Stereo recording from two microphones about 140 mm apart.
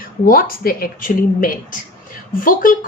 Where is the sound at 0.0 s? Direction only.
90° left.